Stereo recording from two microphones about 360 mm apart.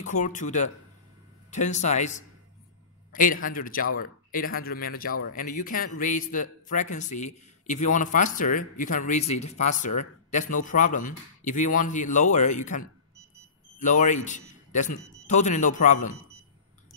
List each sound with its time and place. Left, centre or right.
0.0 s a man's voice: left